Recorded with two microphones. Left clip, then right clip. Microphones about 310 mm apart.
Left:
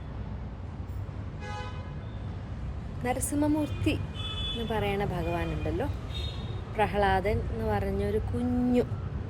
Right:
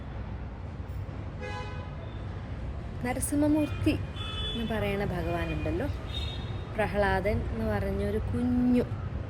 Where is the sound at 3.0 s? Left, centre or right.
Centre.